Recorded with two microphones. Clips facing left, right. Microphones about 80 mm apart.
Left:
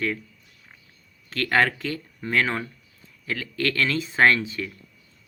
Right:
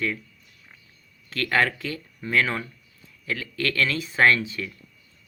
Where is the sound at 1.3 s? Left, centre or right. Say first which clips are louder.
Left 1 dB; left.